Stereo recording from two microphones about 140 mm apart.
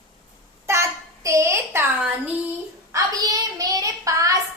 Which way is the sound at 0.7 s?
20° right (ahead or behind).